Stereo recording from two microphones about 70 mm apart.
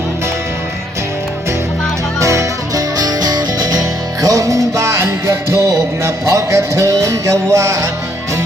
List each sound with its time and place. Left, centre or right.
2.1 s music: right